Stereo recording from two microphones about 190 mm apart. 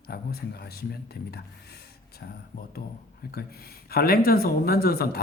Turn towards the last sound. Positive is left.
turn(degrees=55)  # may be behind; listen again after turning